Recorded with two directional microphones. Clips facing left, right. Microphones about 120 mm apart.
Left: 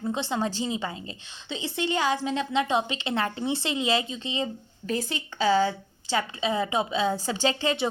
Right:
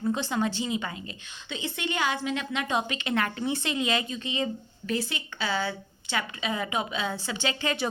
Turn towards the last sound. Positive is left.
turn(degrees=30)  # may be behind; listen again after turning